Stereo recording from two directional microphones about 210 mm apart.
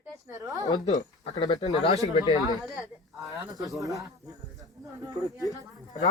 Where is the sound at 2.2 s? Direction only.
20° left (ahead or behind).